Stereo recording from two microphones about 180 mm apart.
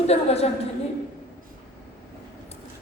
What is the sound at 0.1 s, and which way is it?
Speech, 35° left (ahead or behind).